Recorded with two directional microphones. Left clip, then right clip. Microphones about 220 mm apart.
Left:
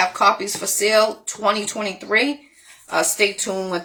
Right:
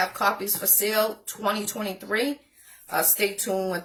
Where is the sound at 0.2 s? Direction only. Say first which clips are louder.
Left 7 dB; 10° right (ahead or behind).